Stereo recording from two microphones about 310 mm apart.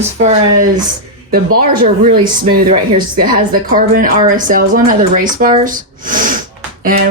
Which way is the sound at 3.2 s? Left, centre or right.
Right.